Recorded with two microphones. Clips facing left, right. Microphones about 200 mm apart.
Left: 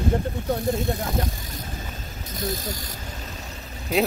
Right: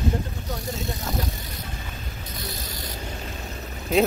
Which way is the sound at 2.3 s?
45° left (ahead or behind).